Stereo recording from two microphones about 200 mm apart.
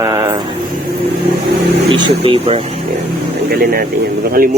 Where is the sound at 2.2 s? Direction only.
30° right (ahead or behind).